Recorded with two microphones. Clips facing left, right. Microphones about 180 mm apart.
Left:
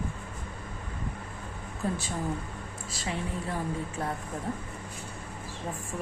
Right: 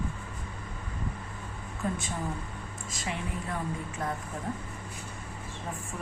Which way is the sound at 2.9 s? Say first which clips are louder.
Left 2 dB; 30° left (ahead or behind).